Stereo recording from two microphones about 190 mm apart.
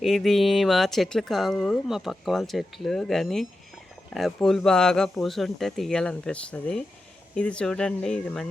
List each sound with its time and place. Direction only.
0.0 s speech: centre (ahead or behind)